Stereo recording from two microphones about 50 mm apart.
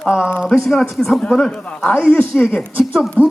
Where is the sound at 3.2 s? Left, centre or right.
Right.